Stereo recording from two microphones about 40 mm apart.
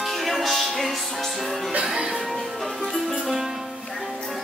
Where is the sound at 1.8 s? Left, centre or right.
Centre.